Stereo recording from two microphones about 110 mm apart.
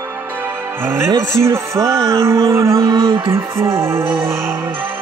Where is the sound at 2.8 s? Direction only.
50° right (ahead or behind).